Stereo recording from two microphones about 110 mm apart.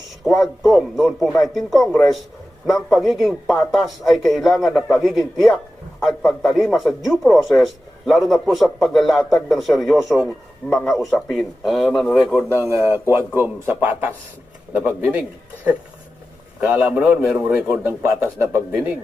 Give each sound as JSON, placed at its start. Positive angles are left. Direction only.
{"t": 0.3, "sound": "a man's voice", "side_deg": 0}
{"t": 3.0, "sound": "a man's voice", "side_deg": 0}
{"t": 12.4, "sound": "a man's voice", "side_deg": 20}
{"t": 12.6, "sound": "a man's voice", "side_deg": -25}